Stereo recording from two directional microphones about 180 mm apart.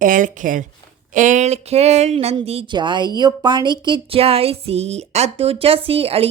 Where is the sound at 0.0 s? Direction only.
45° right (ahead or behind).